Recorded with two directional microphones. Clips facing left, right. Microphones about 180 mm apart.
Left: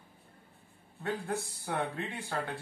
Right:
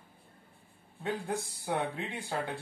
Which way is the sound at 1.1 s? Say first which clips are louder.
Even; 15° right (ahead or behind).